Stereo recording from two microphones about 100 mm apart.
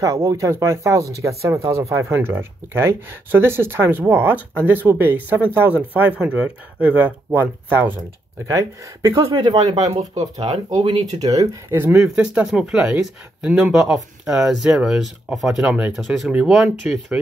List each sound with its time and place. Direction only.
0.0 s speech: 35° right (ahead or behind)
6.2 s speech: 10° right (ahead or behind)
8.5 s speech: 35° right (ahead or behind)
9.1 s speech: 50° right (ahead or behind)
11.7 s speech: 25° right (ahead or behind)
12.0 s speech: 10° right (ahead or behind)